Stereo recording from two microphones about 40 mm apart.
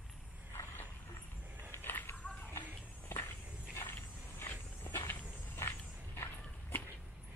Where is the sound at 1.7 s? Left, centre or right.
Left.